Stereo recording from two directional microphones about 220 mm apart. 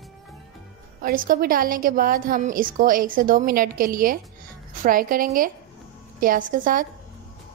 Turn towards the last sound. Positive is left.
turn(degrees=-40)  # may be behind; listen again after turning